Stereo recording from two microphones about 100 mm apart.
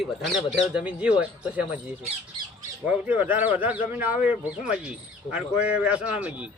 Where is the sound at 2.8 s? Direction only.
15° right (ahead or behind).